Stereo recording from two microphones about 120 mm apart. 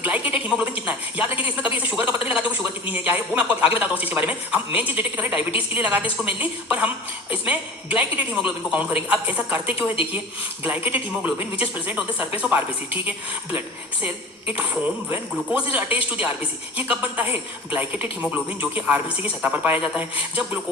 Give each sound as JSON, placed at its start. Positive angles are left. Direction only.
{"t": 0.0, "sound": "a woman's voice", "side_deg": -15}
{"t": 9.6, "sound": "a woman's voice", "side_deg": 50}
{"t": 10.6, "sound": "a woman's voice", "side_deg": -15}
{"t": 15.7, "sound": "a woman's voice", "side_deg": -10}